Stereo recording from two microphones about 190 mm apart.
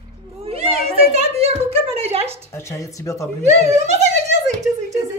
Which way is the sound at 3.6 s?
35° right (ahead or behind).